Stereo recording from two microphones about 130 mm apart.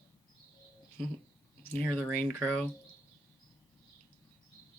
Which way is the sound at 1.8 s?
10° left (ahead or behind).